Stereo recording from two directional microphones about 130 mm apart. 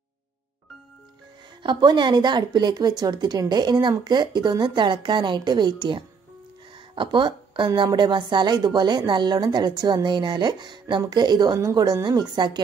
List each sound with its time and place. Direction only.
1.6 s a woman's voice: 35° right (ahead or behind)